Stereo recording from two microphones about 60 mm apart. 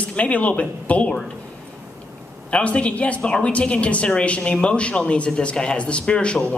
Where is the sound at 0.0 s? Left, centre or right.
Left.